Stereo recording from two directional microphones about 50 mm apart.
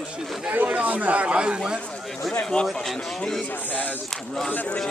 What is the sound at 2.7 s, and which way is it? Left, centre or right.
Speech, centre.